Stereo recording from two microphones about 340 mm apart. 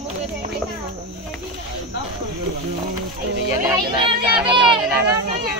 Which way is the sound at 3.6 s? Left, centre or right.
Centre.